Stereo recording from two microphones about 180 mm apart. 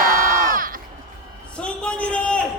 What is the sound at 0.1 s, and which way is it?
Crowd, 15° right (ahead or behind).